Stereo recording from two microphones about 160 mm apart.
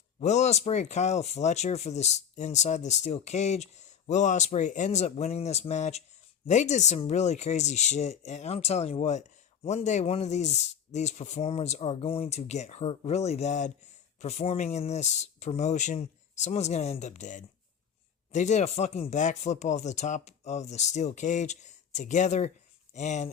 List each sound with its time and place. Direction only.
0.2 s speech: 45° left (ahead or behind)